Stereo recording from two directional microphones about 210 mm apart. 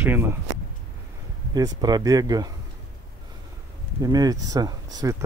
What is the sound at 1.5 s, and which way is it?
Speech, 20° right (ahead or behind).